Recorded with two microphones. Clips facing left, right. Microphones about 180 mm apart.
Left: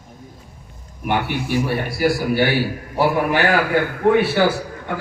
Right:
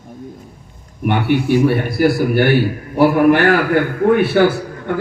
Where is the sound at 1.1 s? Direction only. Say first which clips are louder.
Right 6 dB; 55° right (ahead or behind).